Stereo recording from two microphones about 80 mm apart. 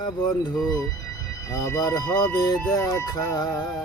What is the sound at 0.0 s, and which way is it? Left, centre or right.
Speech, left.